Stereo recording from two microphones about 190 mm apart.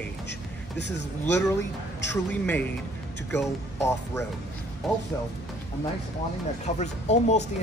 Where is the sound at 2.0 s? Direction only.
10° left (ahead or behind).